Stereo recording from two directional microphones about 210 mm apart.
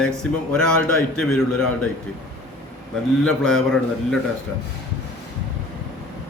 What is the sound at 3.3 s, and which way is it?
Speech, 5° left (ahead or behind).